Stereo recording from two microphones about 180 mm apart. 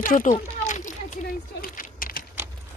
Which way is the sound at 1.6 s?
50° left (ahead or behind).